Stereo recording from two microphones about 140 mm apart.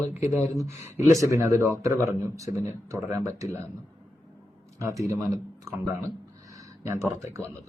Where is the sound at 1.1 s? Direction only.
25° right (ahead or behind).